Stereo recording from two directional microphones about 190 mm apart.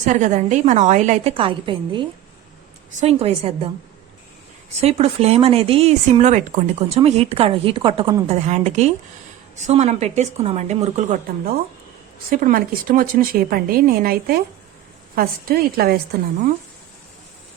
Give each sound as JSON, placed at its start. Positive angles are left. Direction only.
{"t": 0.0, "sound": "speech", "side_deg": -40}
{"t": 4.8, "sound": "speech", "side_deg": -30}
{"t": 8.3, "sound": "speech", "side_deg": -35}